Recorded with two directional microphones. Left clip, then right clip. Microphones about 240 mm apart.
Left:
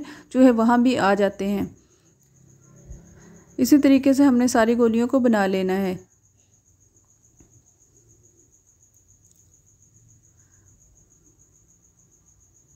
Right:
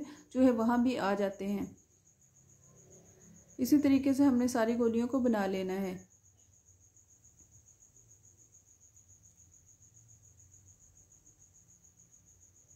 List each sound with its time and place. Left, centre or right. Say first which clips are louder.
0.0 s speech: left 11 dB; left
3.5 s speech: left 11 dB; left